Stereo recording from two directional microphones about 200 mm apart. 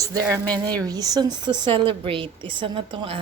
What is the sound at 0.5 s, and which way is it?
A woman's voice, 20° right (ahead or behind).